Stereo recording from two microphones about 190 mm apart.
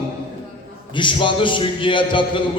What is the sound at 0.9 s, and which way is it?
A man's voice, 25° left (ahead or behind).